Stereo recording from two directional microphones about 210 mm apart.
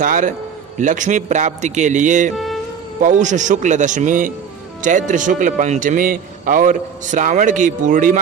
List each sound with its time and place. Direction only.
0.0 s a man's voice: 40° right (ahead or behind)
2.3 s insect: centre (ahead or behind)
3.0 s a man's voice: 35° right (ahead or behind)